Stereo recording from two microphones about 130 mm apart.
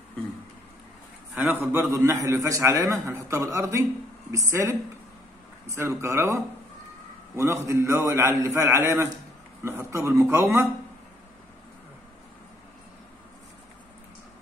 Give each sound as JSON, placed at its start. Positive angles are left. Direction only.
{"t": 1.3, "sound": "a man's voice", "side_deg": -15}